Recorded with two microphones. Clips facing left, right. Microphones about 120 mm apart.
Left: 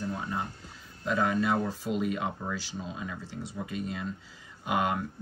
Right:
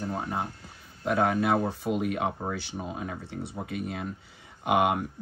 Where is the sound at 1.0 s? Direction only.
60° right (ahead or behind).